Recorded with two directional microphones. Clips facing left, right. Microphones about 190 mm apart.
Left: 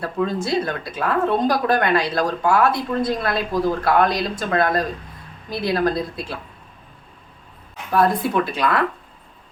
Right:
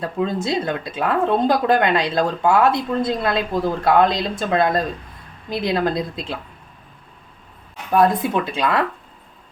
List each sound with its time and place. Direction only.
0.0 s speech: 20° right (ahead or behind)
7.9 s speech: 20° right (ahead or behind)